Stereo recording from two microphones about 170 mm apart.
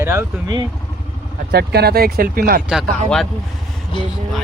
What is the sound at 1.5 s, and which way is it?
Speech, 70° right (ahead or behind).